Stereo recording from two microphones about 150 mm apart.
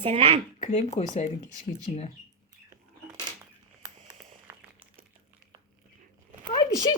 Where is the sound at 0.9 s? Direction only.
45° left (ahead or behind).